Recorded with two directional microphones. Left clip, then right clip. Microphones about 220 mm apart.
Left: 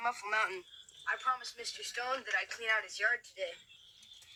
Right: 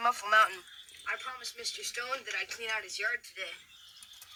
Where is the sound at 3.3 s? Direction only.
35° right (ahead or behind).